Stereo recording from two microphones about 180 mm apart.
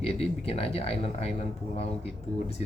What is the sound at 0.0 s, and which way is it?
Speech, 35° left (ahead or behind).